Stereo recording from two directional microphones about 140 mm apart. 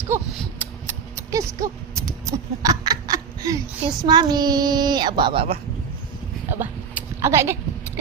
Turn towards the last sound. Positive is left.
turn(degrees=-20)  # may be behind; listen again after turning